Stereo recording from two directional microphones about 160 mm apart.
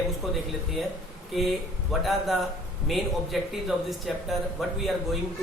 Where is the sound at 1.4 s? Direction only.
Centre (ahead or behind).